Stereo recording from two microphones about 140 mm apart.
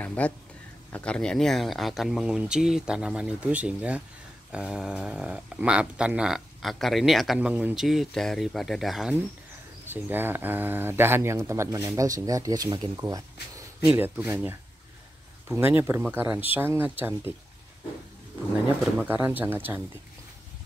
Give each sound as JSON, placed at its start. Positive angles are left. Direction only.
{"t": 0.0, "sound": "a sound", "side_deg": 10}
{"t": 0.9, "sound": "speech", "side_deg": 5}
{"t": 9.8, "sound": "speech", "side_deg": -15}
{"t": 13.8, "sound": "speech", "side_deg": -10}
{"t": 18.9, "sound": "speech", "side_deg": -15}